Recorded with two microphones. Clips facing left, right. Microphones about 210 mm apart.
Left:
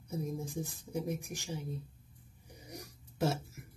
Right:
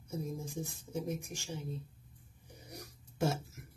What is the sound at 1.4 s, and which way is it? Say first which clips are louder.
Speech: left 1 dB; 10° left (ahead or behind).